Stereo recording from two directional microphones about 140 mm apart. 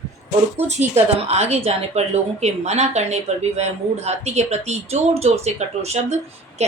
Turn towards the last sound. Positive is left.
turn(degrees=-50)  # may be behind; listen again after turning